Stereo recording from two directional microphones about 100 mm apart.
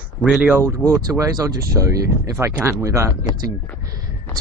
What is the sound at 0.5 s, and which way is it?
Speech, 30° right (ahead or behind).